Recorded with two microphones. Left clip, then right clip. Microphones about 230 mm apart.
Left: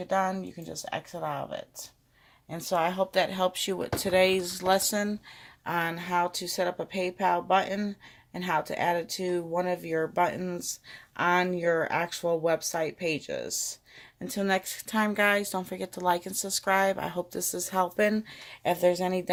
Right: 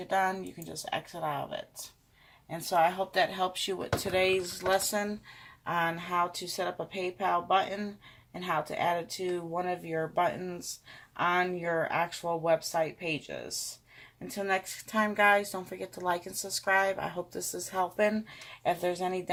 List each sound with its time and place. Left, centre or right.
0.0 s speech: left